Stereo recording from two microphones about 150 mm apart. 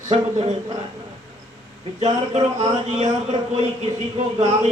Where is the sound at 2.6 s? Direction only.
50° right (ahead or behind).